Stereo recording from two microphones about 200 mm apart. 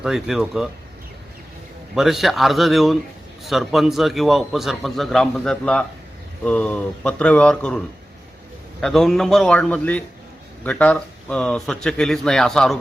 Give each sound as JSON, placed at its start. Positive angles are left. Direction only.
{"t": 0.0, "sound": "a man's voice", "side_deg": 0}
{"t": 2.0, "sound": "a man's voice", "side_deg": 0}
{"t": 8.8, "sound": "a man's voice", "side_deg": 0}